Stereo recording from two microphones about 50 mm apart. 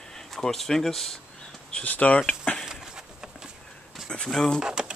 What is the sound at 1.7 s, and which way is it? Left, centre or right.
Speech, left.